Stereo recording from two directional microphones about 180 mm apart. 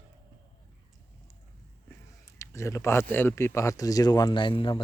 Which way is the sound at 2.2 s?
15° left (ahead or behind).